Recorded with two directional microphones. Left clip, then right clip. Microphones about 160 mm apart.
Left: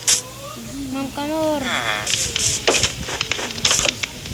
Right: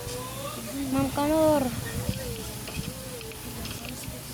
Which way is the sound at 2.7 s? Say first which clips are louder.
Left 19 dB; 75° left (ahead or behind).